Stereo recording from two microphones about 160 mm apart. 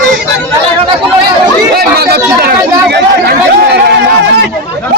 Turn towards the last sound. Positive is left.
turn(degrees=-90)